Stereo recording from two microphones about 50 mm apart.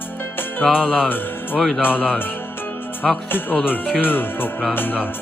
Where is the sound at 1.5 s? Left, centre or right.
Centre.